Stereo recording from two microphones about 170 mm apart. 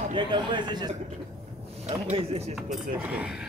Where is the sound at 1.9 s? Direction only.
35° right (ahead or behind).